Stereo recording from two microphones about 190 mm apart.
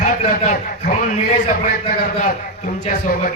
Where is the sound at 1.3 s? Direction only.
35° left (ahead or behind).